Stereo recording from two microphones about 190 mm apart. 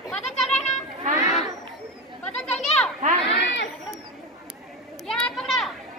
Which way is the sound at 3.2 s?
65° left (ahead or behind).